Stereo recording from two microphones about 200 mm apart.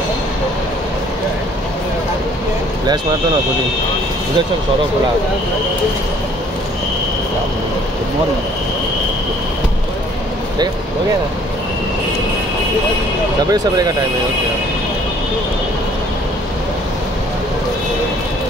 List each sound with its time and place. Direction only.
13.5 s speech: 20° right (ahead or behind)